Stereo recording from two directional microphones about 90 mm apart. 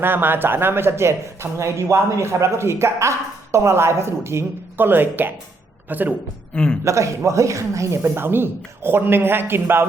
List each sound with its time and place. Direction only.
0.0 s speech: 25° right (ahead or behind)
6.5 s a man's voice: 10° left (ahead or behind)
6.8 s speech: 35° right (ahead or behind)